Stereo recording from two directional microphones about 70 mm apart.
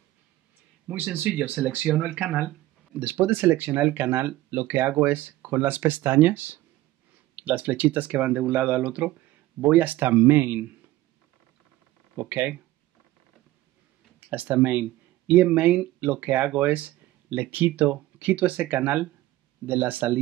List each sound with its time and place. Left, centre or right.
0.8 s speech: right
12.2 s speech: right
14.3 s speech: right